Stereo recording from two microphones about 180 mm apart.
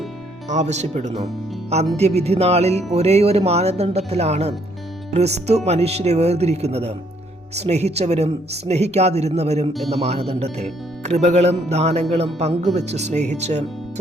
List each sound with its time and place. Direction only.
0.4 s speech: 40° right (ahead or behind)